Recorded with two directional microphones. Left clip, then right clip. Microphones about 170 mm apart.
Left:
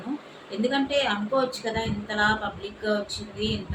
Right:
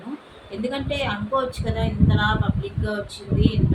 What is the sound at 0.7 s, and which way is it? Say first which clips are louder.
Speech: left 2 dB; 5° left (ahead or behind).